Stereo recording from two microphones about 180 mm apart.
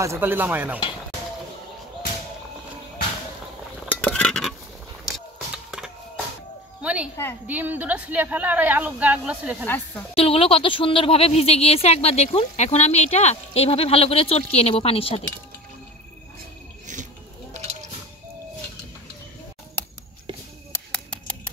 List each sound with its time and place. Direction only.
0.0 s speech: 15° right (ahead or behind)
3.9 s dishes: 5° left (ahead or behind)
6.8 s a sound: 5° right (ahead or behind)
7.4 s speech: 10° right (ahead or behind)
10.1 s speech: 30° left (ahead or behind)
16.8 s wild animals: 45° right (ahead or behind)